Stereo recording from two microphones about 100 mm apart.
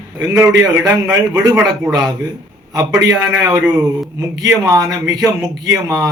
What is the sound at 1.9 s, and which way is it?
Speech, 40° right (ahead or behind).